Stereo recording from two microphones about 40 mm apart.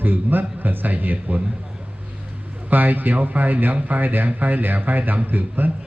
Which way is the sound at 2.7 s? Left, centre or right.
Right.